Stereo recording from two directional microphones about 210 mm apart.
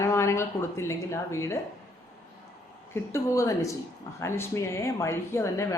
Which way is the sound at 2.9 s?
15° left (ahead or behind).